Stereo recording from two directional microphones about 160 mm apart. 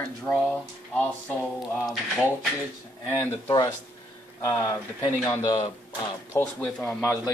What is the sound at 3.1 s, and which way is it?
Speech, 15° left (ahead or behind).